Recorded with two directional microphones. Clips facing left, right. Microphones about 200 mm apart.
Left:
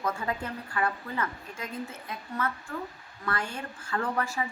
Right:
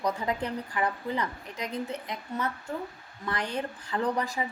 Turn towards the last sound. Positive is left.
turn(degrees=-15)  # may be behind; listen again after turning